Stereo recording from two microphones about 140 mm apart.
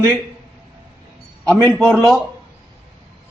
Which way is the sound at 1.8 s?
5° left (ahead or behind).